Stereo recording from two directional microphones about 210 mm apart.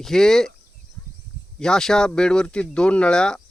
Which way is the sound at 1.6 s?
Centre (ahead or behind).